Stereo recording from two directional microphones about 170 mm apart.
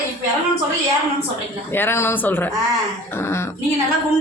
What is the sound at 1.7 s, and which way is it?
Speech, 15° left (ahead or behind).